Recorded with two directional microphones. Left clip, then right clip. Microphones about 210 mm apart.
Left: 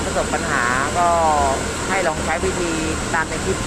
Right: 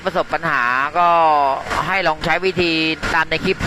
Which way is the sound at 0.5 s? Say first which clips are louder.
Right 2 dB; 40° right (ahead or behind).